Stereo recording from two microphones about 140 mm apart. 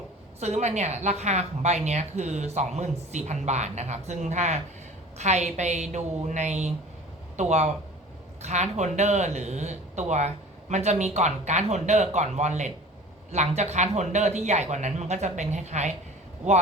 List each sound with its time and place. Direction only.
0.3 s a woman's voice: 50° right (ahead or behind)